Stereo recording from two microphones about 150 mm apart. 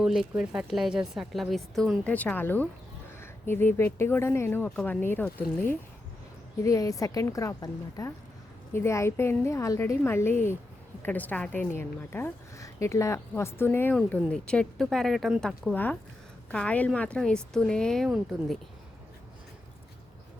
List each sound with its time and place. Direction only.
0.0 s a woman's voice: 5° right (ahead or behind)
6.6 s a woman's voice: 20° left (ahead or behind); by 18.5 s centre (ahead or behind)